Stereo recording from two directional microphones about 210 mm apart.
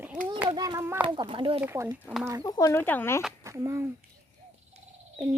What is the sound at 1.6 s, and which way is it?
Speech, 10° right (ahead or behind).